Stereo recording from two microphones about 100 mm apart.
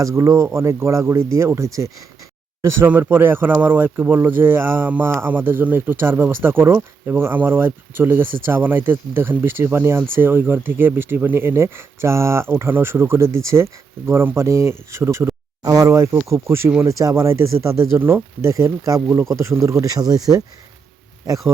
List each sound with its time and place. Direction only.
0.0 s speech: 30° right (ahead or behind)
2.8 s speech: 20° right (ahead or behind)
15.6 s speech: 40° right (ahead or behind)